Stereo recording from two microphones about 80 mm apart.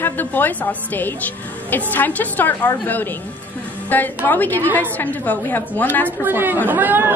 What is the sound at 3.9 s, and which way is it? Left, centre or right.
A woman's voice, left.